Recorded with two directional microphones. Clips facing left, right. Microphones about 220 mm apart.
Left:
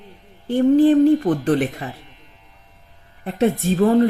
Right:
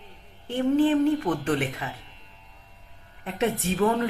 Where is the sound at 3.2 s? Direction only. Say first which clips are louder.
Left 7 dB; 40° left (ahead or behind).